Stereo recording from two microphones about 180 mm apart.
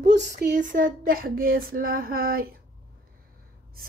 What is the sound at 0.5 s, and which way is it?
A woman's voice, 45° right (ahead or behind).